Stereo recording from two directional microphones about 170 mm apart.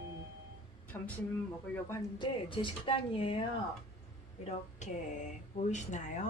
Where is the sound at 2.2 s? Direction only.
30° left (ahead or behind).